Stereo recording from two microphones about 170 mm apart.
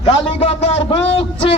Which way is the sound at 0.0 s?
35° left (ahead or behind).